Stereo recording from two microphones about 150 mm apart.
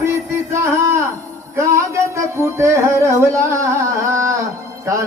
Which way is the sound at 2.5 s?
20° right (ahead or behind).